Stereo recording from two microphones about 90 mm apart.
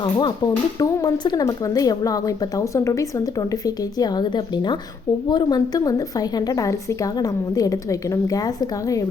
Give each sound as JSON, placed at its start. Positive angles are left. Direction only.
{"t": 0.0, "sound": "speech", "side_deg": 55}
{"t": 1.5, "sound": "a woman's voice", "side_deg": 40}
{"t": 3.9, "sound": "speech", "side_deg": 45}